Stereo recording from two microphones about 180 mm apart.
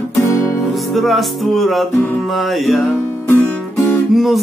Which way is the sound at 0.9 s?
Centre (ahead or behind).